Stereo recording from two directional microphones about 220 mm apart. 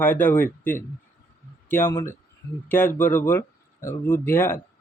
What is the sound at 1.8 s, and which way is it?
Speech, 10° left (ahead or behind).